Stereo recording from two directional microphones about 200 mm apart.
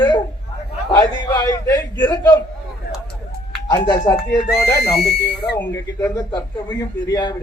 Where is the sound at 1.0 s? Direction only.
15° left (ahead or behind).